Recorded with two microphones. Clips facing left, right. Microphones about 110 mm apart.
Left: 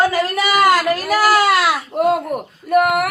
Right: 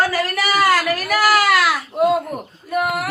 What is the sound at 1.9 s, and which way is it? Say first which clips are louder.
Speech: even; 55° left (ahead or behind).